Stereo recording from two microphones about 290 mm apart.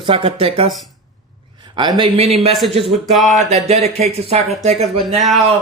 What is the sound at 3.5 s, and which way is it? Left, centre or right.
Speech, right.